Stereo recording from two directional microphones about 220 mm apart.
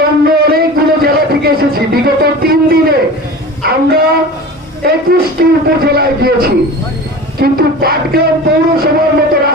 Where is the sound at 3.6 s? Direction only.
45° right (ahead or behind).